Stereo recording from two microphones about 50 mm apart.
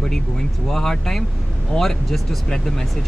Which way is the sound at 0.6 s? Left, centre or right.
Centre.